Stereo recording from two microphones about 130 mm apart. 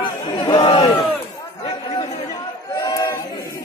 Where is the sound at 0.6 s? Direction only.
30° left (ahead or behind).